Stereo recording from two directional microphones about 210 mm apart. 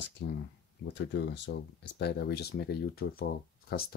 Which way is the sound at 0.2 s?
55° left (ahead or behind).